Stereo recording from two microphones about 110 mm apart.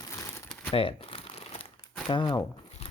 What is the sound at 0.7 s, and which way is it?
Crumpling, 55° left (ahead or behind).